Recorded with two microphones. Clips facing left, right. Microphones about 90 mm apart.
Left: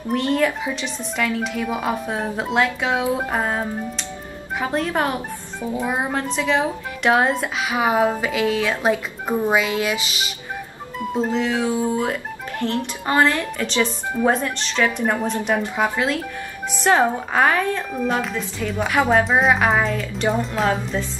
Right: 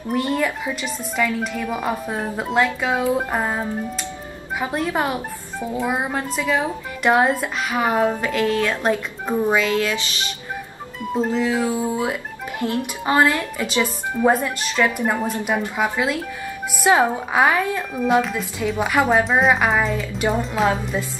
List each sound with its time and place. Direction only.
0.1 s a woman's voice: 5° right (ahead or behind); by 10.3 s 10° left (ahead or behind)
11.1 s a woman's voice: centre (ahead or behind)